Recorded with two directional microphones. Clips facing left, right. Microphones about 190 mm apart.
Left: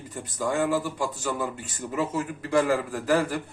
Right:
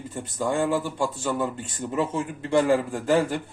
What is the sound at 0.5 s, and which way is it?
A man's voice, 25° right (ahead or behind).